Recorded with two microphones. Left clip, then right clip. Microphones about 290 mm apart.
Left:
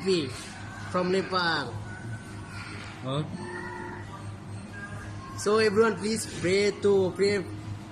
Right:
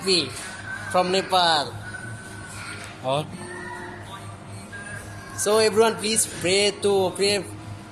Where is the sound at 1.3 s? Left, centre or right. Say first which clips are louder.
Right 12 dB; centre.